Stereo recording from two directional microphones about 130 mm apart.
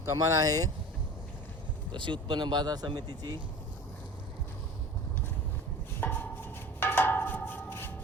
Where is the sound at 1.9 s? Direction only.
40° right (ahead or behind).